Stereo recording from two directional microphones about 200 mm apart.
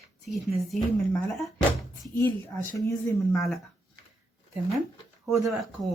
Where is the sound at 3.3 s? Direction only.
Centre (ahead or behind).